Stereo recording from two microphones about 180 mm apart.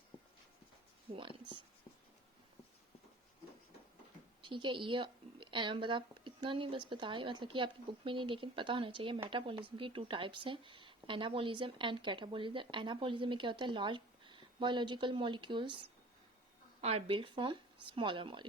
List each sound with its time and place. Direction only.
4.4 s speech: 25° right (ahead or behind)
16.8 s speech: 30° right (ahead or behind)